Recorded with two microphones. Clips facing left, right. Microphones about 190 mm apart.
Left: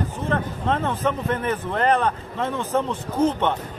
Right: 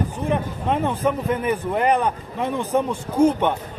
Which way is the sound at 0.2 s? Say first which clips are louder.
Even; 15° right (ahead or behind).